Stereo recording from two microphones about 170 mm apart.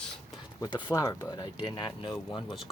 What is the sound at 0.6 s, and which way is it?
Speech, 25° left (ahead or behind).